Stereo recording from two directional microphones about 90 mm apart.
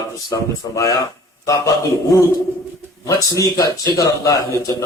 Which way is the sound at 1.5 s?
35° left (ahead or behind).